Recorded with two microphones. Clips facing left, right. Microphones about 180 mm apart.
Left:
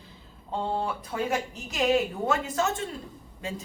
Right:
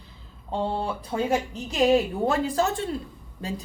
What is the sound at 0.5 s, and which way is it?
A woman's voice, 30° right (ahead or behind).